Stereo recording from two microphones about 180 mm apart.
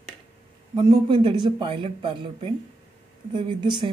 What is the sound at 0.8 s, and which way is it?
Speech, 25° right (ahead or behind).